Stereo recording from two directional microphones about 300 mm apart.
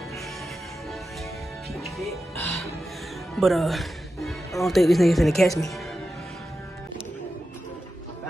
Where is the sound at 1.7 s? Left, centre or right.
Centre.